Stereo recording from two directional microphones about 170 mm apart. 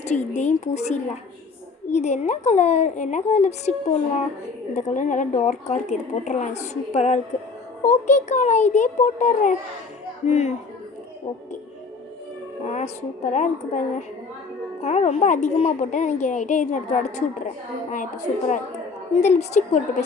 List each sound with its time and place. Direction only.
0.0 s speech: 40° left (ahead or behind)
12.7 s speech: 40° left (ahead or behind)